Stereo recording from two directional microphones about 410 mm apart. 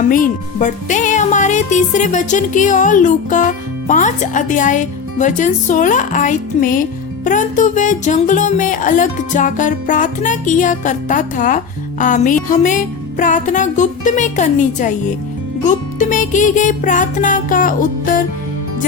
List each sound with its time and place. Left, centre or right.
0.1 s music: centre